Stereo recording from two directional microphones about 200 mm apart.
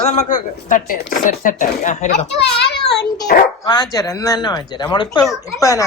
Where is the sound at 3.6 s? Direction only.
20° left (ahead or behind).